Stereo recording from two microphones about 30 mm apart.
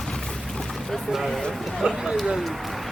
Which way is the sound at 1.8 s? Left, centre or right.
Centre.